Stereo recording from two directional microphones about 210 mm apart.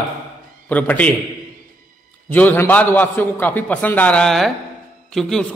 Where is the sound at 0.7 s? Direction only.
5° left (ahead or behind).